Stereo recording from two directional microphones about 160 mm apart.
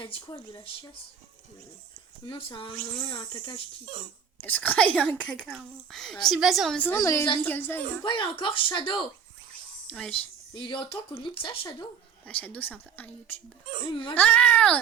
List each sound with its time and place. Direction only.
0.0 s speech: 35° left (ahead or behind)
2.2 s speech: 30° left (ahead or behind)
4.4 s speech: 10° left (ahead or behind)
8.0 s speech: 30° left (ahead or behind)
9.9 s speech: 5° left (ahead or behind)
10.5 s speech: 30° left (ahead or behind)
12.2 s speech: 10° left (ahead or behind)
13.8 s speech: 35° left (ahead or behind)
14.2 s speech: 5° left (ahead or behind)